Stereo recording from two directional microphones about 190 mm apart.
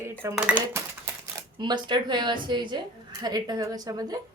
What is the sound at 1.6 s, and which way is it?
Speech, 25° right (ahead or behind).